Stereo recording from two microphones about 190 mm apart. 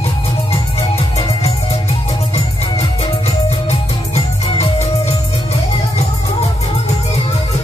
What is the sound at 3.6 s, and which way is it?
Music, 30° left (ahead or behind).